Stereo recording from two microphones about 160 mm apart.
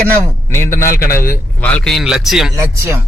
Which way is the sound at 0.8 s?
65° left (ahead or behind).